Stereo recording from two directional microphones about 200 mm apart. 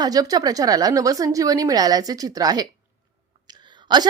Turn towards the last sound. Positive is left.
turn(degrees=-20)  # may be behind; listen again after turning